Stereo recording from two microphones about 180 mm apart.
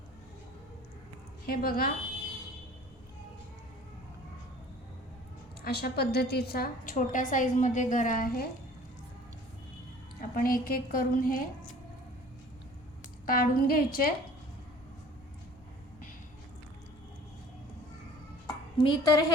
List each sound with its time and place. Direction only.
1.5 s a woman's voice: 55° left (ahead or behind)
5.6 s a woman's voice: 60° left (ahead or behind)
10.2 s a woman's voice: 50° left (ahead or behind)
13.2 s a woman's voice: 55° left (ahead or behind)
18.4 s a sound: 25° left (ahead or behind)